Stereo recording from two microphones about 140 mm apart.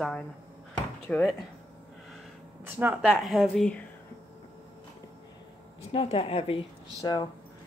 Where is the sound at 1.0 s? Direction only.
5° left (ahead or behind).